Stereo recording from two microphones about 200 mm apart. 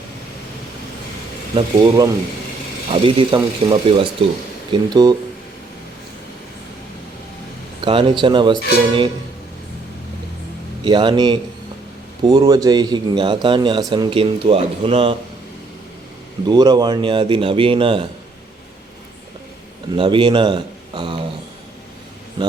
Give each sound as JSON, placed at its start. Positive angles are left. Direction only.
{"t": 1.5, "sound": "a man's voice", "side_deg": -20}
{"t": 7.8, "sound": "a man's voice", "side_deg": -25}
{"t": 10.8, "sound": "a man's voice", "side_deg": -25}
{"t": 16.5, "sound": "a man's voice", "side_deg": -20}
{"t": 20.0, "sound": "a man's voice", "side_deg": -25}